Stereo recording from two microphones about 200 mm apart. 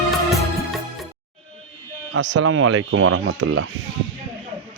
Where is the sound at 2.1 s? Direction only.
75° right (ahead or behind).